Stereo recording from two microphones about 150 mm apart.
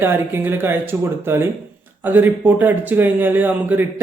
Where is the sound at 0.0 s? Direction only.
15° right (ahead or behind).